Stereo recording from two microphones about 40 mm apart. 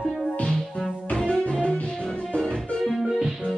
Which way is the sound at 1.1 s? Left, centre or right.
Left.